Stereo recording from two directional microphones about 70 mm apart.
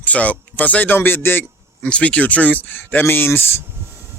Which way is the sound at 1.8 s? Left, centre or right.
Centre.